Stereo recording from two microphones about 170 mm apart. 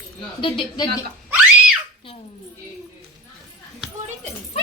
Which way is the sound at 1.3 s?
10° right (ahead or behind).